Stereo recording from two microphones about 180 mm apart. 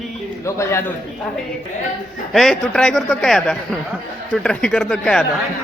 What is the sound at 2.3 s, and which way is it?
Speech, centre (ahead or behind).